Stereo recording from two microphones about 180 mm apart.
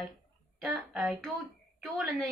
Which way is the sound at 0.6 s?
Centre (ahead or behind).